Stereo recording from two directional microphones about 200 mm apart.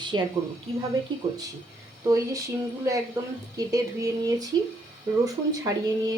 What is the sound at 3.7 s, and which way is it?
Speech, 15° right (ahead or behind).